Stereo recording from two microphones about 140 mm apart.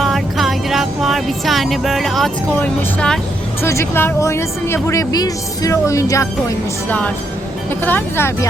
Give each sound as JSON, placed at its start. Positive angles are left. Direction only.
{"t": 0.0, "sound": "music", "side_deg": 0}
{"t": 2.6, "sound": "speech", "side_deg": 5}
{"t": 3.6, "sound": "speech", "side_deg": 20}
{"t": 7.9, "sound": "speech", "side_deg": 15}